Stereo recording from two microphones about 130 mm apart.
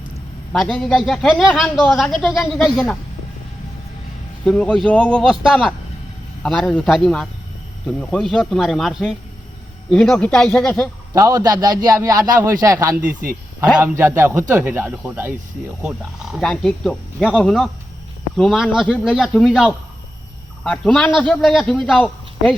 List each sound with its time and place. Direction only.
0.5 s a man's voice: centre (ahead or behind)
4.4 s a man's voice: 5° left (ahead or behind)
11.1 s a man's voice: 25° right (ahead or behind)
13.0 s speech: 90° right
13.7 s a man's voice: 20° right (ahead or behind); by 22.5 s 5° left (ahead or behind)